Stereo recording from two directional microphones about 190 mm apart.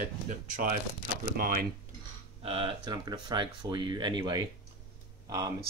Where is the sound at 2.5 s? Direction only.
30° right (ahead or behind).